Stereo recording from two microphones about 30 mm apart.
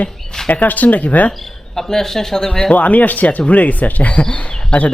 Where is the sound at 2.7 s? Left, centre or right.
Left.